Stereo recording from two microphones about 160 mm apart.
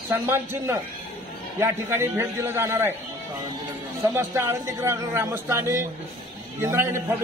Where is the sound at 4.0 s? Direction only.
15° right (ahead or behind).